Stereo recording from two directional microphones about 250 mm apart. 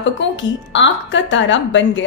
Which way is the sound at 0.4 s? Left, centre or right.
Left.